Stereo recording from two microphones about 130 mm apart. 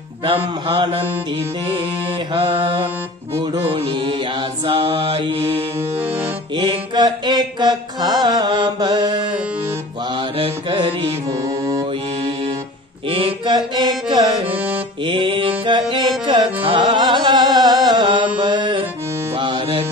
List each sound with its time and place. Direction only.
0.2 s mantra: 45° right (ahead or behind)
2.3 s mantra: 45° right (ahead or behind)
6.5 s music: 40° right (ahead or behind)
10.3 s mantra: 45° right (ahead or behind)
13.1 s music: 40° right (ahead or behind)